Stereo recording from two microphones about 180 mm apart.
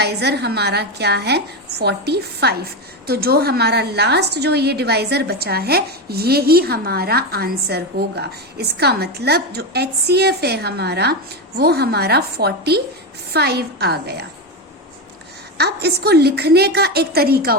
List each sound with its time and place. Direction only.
0.0 s a woman's voice: 65° right (ahead or behind)
15.5 s a woman's voice: 65° right (ahead or behind)